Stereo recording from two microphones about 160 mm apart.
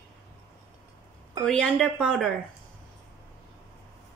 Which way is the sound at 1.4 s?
5° left (ahead or behind).